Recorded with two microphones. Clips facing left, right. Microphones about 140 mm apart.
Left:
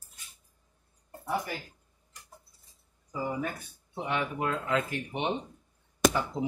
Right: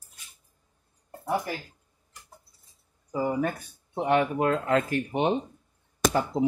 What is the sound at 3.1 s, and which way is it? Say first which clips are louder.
Speech: right 6 dB; 45° right (ahead or behind).